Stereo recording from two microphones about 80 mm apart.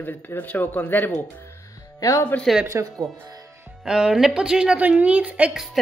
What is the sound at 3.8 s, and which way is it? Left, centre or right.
Speech, centre.